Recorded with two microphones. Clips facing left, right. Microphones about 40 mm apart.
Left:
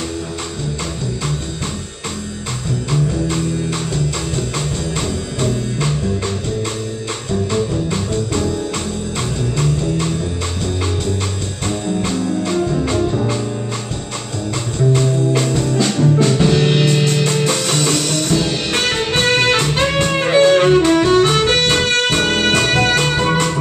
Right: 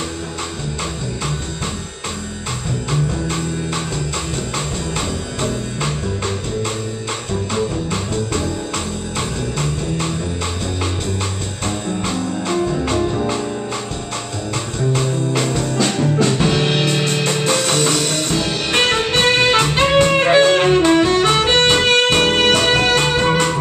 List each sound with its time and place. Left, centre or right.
4.9 s music: centre
7.5 s music: right
12.1 s music: centre
13.1 s organ: centre
14.9 s music: centre
21.8 s music: right
22.8 s music: centre